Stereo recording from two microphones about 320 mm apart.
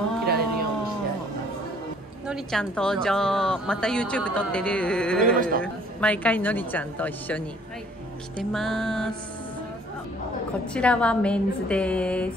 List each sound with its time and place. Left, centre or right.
0.2 s a sound: right
2.2 s speech: centre
10.7 s speech: centre